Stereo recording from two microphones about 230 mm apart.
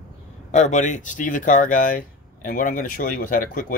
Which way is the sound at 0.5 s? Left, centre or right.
Left.